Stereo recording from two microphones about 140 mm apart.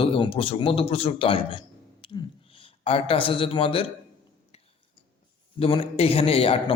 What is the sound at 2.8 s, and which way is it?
A man's voice, 40° left (ahead or behind).